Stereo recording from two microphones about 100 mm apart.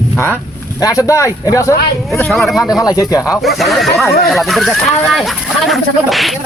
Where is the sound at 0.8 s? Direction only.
35° left (ahead or behind).